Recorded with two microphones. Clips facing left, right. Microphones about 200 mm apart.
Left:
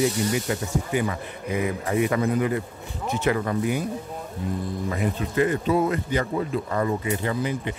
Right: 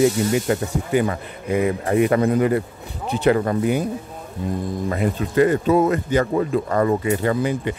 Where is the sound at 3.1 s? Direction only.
30° right (ahead or behind).